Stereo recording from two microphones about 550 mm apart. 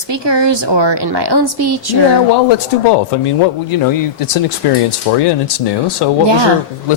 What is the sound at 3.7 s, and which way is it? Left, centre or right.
A man's voice, left.